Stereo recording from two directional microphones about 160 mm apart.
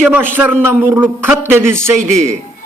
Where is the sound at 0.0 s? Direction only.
10° right (ahead or behind).